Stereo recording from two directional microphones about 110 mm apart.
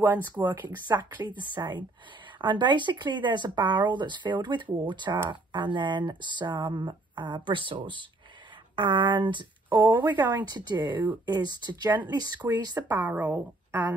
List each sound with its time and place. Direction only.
0.7 s speech: 40° right (ahead or behind)
13.1 s speech: 20° right (ahead or behind)